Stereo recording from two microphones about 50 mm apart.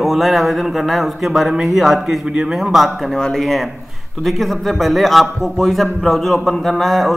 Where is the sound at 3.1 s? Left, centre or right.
Centre.